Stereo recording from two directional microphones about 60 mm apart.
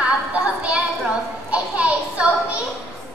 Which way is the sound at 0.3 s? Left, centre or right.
Right.